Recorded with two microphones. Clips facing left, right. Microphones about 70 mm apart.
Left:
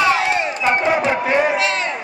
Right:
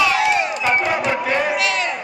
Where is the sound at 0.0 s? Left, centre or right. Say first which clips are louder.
Even; left.